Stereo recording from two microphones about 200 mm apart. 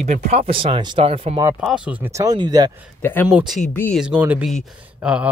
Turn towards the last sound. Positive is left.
turn(degrees=-5)  # may be behind; listen again after turning